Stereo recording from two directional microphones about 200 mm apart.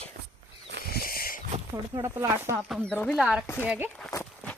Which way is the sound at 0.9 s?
50° left (ahead or behind).